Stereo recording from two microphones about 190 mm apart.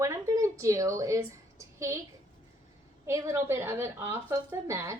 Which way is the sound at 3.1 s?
15° right (ahead or behind).